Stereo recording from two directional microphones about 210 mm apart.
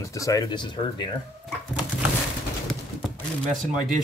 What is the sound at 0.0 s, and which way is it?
Speech, 15° left (ahead or behind).